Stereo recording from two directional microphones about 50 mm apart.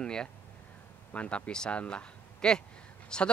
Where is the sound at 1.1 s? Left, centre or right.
Left.